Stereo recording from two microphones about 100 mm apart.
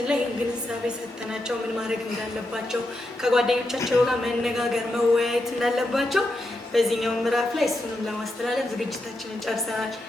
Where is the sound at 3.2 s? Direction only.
5° right (ahead or behind).